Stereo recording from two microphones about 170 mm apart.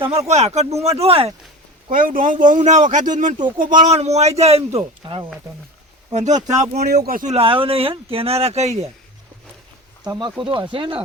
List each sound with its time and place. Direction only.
0.3 s speech: 40° right (ahead or behind)
1.9 s speech: 55° right (ahead or behind); by 5.3 s 30° right (ahead or behind)
6.1 s speech: 45° right (ahead or behind)
6.8 s speech: 65° right (ahead or behind)
7.3 s speech: 30° right (ahead or behind)
10.0 s speech: 25° right (ahead or behind)